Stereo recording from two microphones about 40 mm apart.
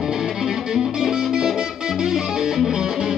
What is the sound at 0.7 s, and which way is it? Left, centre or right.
Music, centre.